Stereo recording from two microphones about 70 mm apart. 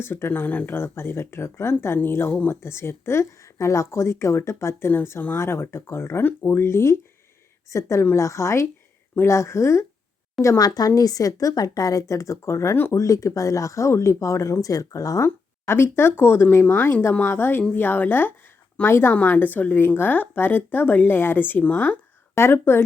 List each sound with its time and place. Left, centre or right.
0.0 s speech: left
10.6 s speech: left
12.7 s speech: left
13.0 s speech: left
15.6 s speech: left
22.4 s speech: left